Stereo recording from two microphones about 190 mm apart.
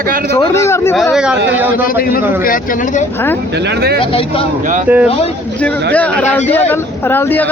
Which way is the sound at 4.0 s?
30° left (ahead or behind).